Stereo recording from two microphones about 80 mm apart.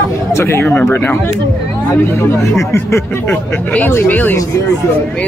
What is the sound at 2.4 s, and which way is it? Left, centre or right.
Speech, left.